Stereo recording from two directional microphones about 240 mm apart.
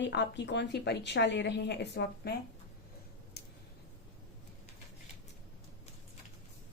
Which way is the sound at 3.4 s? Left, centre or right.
Left.